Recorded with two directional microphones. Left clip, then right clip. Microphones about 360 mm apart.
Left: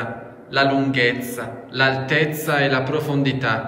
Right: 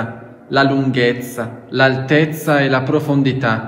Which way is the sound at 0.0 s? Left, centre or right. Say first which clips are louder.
Right 2 dB; centre.